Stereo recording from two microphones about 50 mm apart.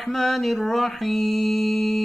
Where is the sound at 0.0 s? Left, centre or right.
Centre.